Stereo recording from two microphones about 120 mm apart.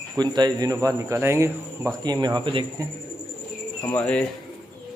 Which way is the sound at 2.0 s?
35° right (ahead or behind).